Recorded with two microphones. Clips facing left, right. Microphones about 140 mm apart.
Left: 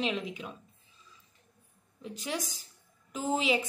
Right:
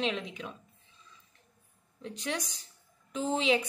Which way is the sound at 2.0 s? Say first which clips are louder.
Even; 5° left (ahead or behind).